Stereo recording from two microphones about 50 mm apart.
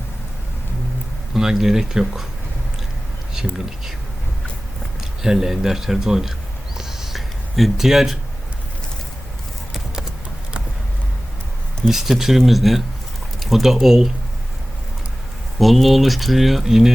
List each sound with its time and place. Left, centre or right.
1.3 s speech: centre
4.9 s speech: centre
6.7 s a sound: centre
11.9 s speech: centre
15.5 s speech: centre